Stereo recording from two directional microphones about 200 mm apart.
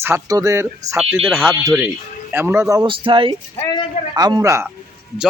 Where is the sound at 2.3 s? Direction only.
10° right (ahead or behind).